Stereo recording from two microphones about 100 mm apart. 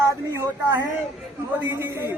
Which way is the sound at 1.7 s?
25° right (ahead or behind).